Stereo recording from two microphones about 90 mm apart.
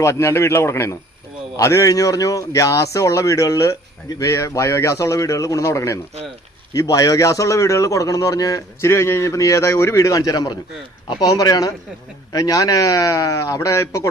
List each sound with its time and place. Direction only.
0.0 s a man's voice: 30° left (ahead or behind)